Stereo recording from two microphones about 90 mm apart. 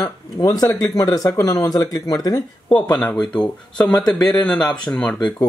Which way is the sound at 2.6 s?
60° left (ahead or behind).